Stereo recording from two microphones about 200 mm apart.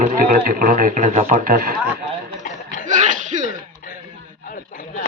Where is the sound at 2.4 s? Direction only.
40° left (ahead or behind).